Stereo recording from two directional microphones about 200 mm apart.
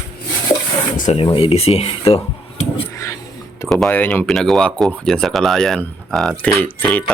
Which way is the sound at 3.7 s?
5° left (ahead or behind).